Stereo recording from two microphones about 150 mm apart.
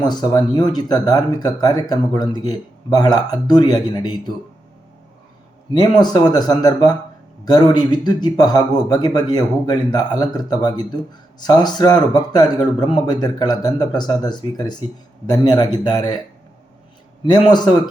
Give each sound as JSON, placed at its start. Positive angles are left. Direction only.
{"t": 0.0, "sound": "speech", "side_deg": 30}
{"t": 5.7, "sound": "speech", "side_deg": 30}
{"t": 17.2, "sound": "speech", "side_deg": 30}